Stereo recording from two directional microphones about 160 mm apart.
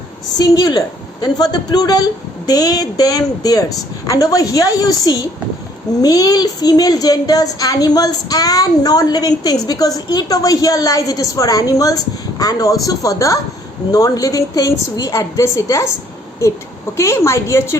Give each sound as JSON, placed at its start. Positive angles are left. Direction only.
{"t": 0.3, "sound": "speech", "side_deg": 25}
{"t": 17.0, "sound": "a woman's voice", "side_deg": 15}